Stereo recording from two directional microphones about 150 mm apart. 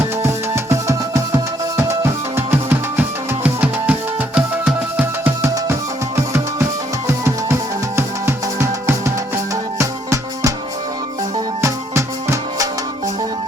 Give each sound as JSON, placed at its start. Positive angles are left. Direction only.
{"t": 0.2, "sound": "music", "side_deg": -20}
{"t": 7.1, "sound": "music", "side_deg": -15}
{"t": 11.6, "sound": "music", "side_deg": -20}